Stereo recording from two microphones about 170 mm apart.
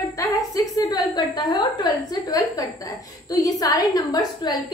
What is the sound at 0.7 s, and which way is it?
A woman's voice, 20° left (ahead or behind).